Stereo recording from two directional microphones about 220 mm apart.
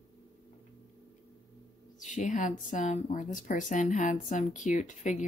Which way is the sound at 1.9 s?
35° left (ahead or behind).